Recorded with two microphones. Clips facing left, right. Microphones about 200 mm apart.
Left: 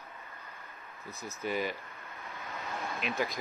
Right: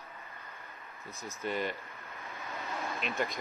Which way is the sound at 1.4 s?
5° left (ahead or behind).